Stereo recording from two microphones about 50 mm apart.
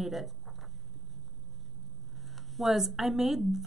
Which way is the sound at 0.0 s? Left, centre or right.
Centre.